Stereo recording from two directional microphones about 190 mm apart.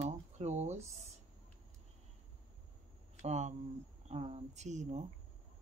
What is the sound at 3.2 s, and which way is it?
Speech, 35° right (ahead or behind).